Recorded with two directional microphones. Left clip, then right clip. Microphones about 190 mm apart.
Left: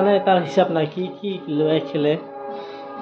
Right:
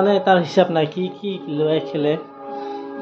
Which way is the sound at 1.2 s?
10° right (ahead or behind).